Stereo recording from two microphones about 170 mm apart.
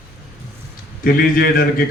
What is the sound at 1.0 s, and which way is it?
Speech, 60° left (ahead or behind).